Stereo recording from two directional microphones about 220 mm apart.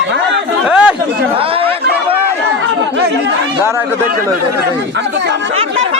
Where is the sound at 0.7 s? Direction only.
5° right (ahead or behind).